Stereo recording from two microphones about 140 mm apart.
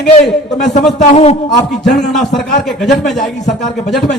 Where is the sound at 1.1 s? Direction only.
50° left (ahead or behind).